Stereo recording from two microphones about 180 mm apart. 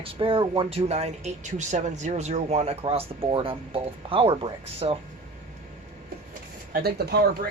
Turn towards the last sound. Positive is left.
turn(degrees=-60)  # may be behind; listen again after turning